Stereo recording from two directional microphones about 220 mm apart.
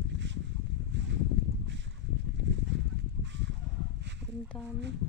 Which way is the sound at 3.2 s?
55° right (ahead or behind).